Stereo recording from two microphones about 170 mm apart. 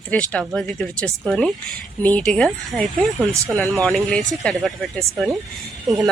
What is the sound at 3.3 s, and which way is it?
Speech, 20° right (ahead or behind).